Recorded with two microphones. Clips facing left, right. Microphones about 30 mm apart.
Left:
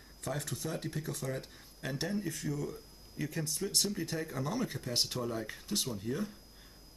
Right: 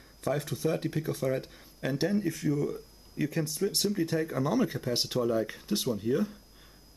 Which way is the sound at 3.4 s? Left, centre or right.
Centre.